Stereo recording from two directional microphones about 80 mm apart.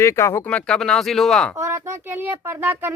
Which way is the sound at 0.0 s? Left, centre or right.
Left.